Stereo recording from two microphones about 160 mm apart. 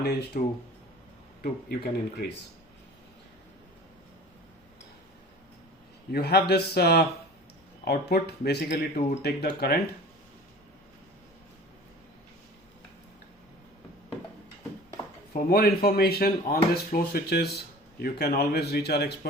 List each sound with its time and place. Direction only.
0.0 s speech: 80° left
6.1 s speech: 85° left
15.3 s speech: 70° left (ahead or behind); by 19.3 s 90° left